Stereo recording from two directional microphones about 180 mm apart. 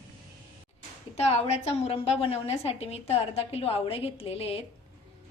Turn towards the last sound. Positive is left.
turn(degrees=30)  # may be behind; listen again after turning